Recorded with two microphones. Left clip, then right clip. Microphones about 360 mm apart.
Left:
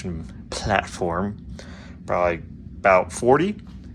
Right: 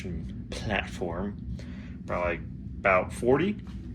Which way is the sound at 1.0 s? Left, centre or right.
Left.